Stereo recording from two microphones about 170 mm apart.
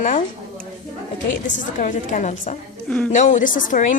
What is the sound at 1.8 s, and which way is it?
Speech, 50° left (ahead or behind).